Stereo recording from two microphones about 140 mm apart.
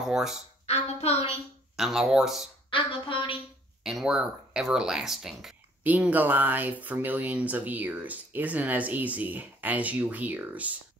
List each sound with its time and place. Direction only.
0.0 s speech: 5° right (ahead or behind)
0.7 s a woman's voice: 45° left (ahead or behind)
1.8 s speech: 5° right (ahead or behind)
2.7 s a woman's voice: 40° left (ahead or behind)
3.8 s speech: 5° right (ahead or behind)